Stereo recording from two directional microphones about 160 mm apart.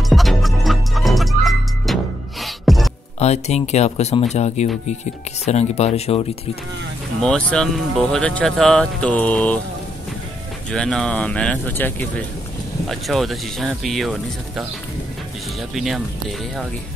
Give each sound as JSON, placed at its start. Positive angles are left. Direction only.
{"t": 0.1, "sound": "music", "side_deg": 0}
{"t": 3.2, "sound": "speech", "side_deg": 45}
{"t": 7.2, "sound": "speech", "side_deg": 5}
{"t": 10.7, "sound": "speech", "side_deg": 5}
{"t": 12.8, "sound": "speech", "side_deg": 0}
{"t": 15.7, "sound": "speech", "side_deg": 0}